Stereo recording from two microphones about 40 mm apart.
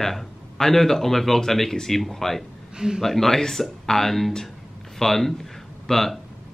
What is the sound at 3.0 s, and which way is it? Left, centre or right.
Speech, centre.